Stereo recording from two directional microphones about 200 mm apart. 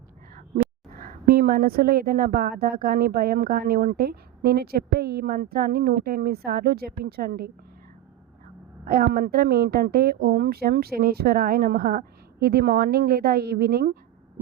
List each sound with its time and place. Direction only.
0.3 s a woman's voice: 45° right (ahead or behind)
8.9 s a woman's voice: 45° right (ahead or behind)